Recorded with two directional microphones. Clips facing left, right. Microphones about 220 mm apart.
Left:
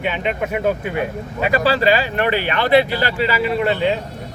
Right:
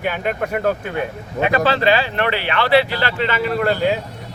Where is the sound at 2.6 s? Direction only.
15° left (ahead or behind); by 4.0 s 5° right (ahead or behind).